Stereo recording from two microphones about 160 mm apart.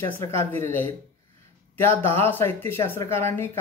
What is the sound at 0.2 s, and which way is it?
Speech, 15° left (ahead or behind).